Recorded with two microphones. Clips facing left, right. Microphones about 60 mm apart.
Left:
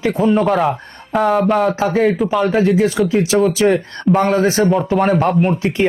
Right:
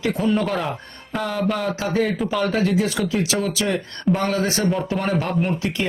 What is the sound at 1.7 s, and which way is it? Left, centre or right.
Speech, left.